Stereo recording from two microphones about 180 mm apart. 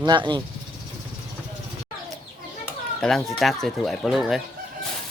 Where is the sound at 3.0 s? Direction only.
Centre (ahead or behind).